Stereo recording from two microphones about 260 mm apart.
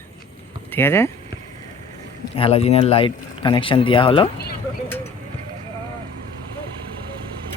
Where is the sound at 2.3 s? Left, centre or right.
Left.